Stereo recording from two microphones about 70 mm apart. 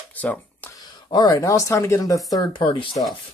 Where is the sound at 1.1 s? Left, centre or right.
Left.